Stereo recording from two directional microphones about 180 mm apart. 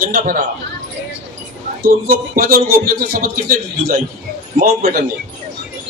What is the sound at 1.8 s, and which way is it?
A man's voice, 55° right (ahead or behind).